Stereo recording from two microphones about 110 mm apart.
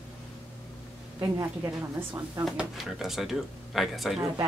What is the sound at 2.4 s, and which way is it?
Speech, 5° right (ahead or behind).